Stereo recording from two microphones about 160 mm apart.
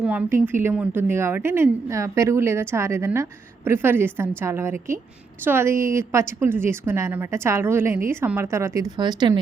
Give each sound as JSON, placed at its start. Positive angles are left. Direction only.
{"t": 0.0, "sound": "a woman's voice", "side_deg": -10}